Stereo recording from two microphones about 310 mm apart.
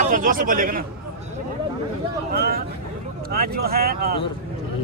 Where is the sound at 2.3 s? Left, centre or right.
Right.